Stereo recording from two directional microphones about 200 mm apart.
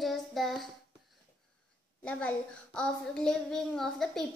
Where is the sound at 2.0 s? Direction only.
5° left (ahead or behind).